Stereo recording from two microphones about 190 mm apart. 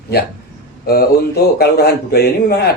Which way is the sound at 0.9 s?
55° left (ahead or behind).